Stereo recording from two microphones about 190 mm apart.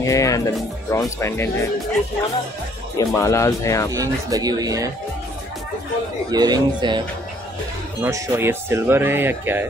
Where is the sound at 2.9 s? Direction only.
15° left (ahead or behind).